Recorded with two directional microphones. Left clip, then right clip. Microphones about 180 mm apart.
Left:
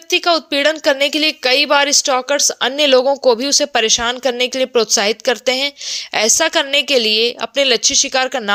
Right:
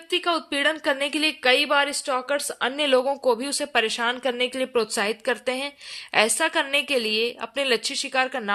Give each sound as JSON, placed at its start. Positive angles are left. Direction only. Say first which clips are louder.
{"t": 0.1, "sound": "a woman's voice", "louder": "left 9 dB", "side_deg": 25}